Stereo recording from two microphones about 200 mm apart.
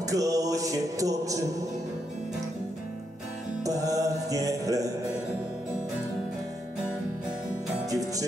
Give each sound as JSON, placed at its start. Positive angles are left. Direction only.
{"t": 0.0, "sound": "music", "side_deg": -15}
{"t": 3.6, "sound": "music", "side_deg": -15}
{"t": 7.9, "sound": "music", "side_deg": -15}